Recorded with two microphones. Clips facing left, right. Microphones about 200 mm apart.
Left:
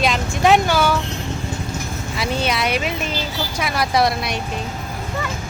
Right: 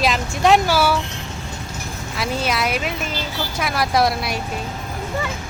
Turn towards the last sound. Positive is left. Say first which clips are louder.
# even
turn(degrees=0)  # may be behind; listen again after turning